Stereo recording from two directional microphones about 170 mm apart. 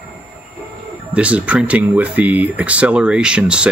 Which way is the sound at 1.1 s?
5° right (ahead or behind).